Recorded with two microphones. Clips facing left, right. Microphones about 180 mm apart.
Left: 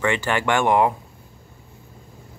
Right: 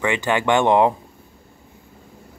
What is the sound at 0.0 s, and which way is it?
Speech, 15° right (ahead or behind).